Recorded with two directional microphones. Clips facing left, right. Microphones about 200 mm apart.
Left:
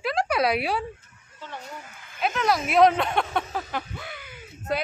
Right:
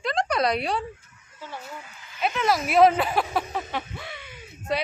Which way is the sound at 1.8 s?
50° left (ahead or behind).